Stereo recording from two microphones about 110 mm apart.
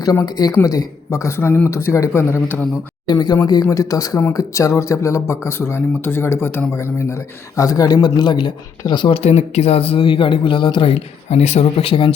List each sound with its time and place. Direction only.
0.0 s speech: 35° left (ahead or behind)
3.1 s speech: 35° left (ahead or behind)
9.1 s speech: 80° left; by 12.1 s 55° left (ahead or behind)